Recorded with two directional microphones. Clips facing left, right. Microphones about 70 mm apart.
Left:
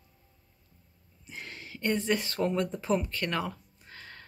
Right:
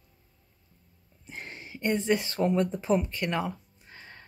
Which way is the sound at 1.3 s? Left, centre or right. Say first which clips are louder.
Right 2 dB; right.